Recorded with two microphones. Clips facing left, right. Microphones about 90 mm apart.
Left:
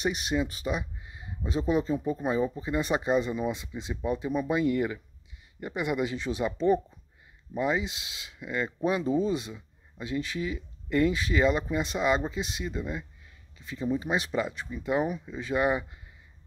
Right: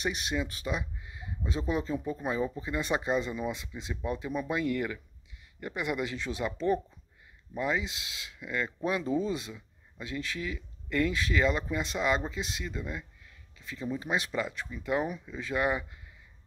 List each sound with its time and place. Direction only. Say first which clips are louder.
0.0 s speech: left 4 dB; 5° left (ahead or behind)